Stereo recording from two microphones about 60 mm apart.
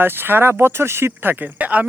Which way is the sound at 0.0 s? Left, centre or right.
Right.